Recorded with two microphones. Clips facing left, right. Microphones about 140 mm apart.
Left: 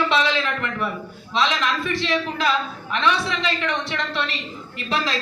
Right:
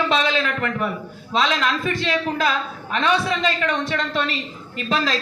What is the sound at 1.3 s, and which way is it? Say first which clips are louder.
A man's voice: right 1 dB; 50° right (ahead or behind).